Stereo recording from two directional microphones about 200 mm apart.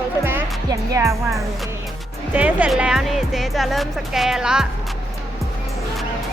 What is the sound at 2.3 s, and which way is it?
Speech, 10° right (ahead or behind).